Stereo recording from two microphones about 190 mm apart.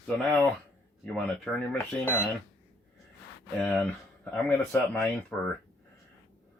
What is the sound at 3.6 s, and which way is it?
Speech, 5° left (ahead or behind).